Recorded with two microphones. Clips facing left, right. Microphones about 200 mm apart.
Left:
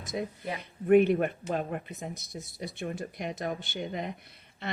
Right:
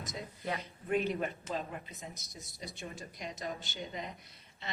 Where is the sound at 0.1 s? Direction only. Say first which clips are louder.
Left 6 dB; 60° left (ahead or behind).